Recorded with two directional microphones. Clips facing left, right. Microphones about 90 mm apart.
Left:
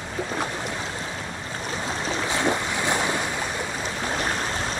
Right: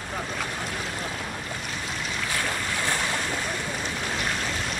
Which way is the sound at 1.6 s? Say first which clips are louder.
Left 4 dB; 30° left (ahead or behind).